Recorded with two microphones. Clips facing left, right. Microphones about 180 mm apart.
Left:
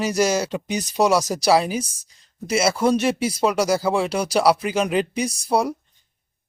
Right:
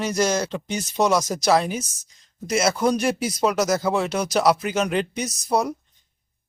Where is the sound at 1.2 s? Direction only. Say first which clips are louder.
Left 2 dB; 35° left (ahead or behind).